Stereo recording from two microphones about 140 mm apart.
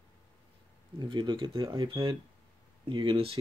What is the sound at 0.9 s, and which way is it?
Speech, 35° right (ahead or behind).